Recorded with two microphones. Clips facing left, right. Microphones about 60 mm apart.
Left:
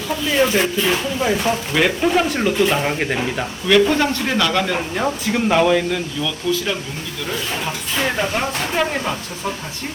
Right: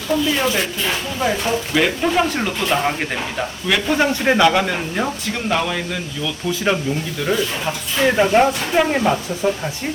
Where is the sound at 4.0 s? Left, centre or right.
Centre.